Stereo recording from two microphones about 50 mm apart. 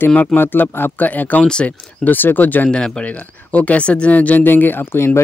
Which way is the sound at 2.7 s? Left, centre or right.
Centre.